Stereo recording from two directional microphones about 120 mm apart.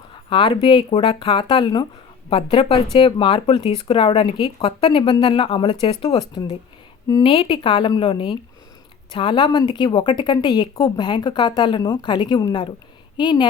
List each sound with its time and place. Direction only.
0.1 s speech: 45° left (ahead or behind)
2.3 s speech: 50° left (ahead or behind)